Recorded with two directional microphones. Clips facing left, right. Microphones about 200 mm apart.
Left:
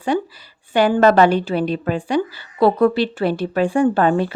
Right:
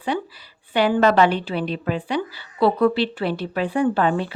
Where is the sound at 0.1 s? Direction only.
45° left (ahead or behind).